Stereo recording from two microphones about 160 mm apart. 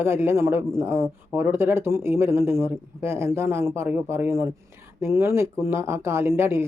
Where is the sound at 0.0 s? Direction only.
15° right (ahead or behind).